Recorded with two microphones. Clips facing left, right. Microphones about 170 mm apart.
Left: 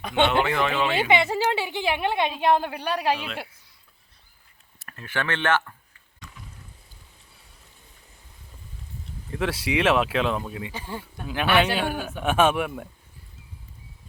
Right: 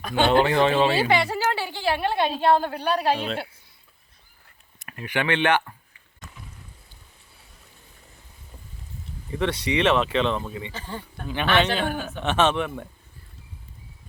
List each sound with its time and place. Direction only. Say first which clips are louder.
0.0 s speech: left 1 dB; 25° left (ahead or behind)
0.3 s speech: right 4 dB; 30° right (ahead or behind)
0.9 s a woman's voice: even; 20° left (ahead or behind)
4.8 s speech: right 3 dB; 15° right (ahead or behind)
9.3 s speech: right 1 dB; 5° left (ahead or behind)